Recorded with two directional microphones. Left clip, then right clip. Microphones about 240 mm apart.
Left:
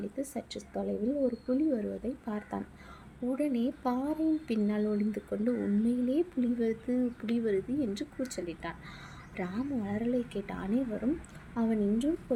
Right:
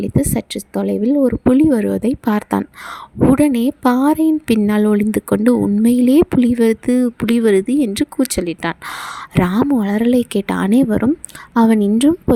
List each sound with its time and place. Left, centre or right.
0.0 s a woman's voice: right